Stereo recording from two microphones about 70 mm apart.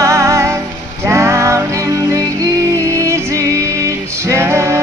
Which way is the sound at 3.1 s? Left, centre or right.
Right.